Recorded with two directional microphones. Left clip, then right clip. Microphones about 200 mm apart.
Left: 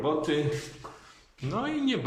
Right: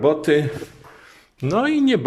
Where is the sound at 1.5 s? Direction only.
50° right (ahead or behind).